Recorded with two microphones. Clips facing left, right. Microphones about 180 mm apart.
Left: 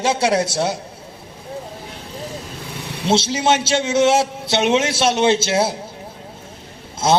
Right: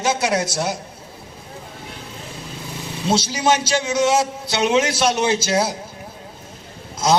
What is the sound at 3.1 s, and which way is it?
A man's voice, 25° left (ahead or behind).